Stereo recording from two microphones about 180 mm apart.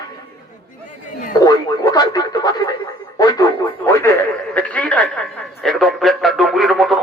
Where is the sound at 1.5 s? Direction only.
20° left (ahead or behind).